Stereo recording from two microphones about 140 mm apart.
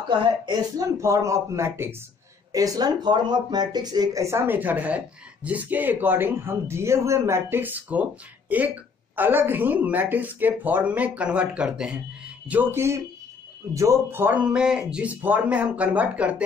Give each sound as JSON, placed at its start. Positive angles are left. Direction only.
{"t": 0.2, "sound": "speech", "side_deg": -30}
{"t": 0.9, "sound": "speech", "side_deg": -20}